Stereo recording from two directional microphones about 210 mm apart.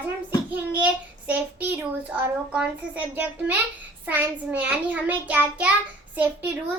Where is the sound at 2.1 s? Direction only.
5° right (ahead or behind).